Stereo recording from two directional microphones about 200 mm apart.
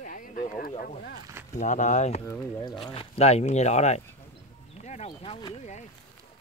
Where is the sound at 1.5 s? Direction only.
40° left (ahead or behind).